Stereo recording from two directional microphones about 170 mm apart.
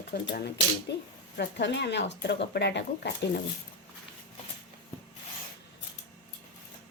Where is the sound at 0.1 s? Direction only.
70° left (ahead or behind); by 2.1 s 90° left.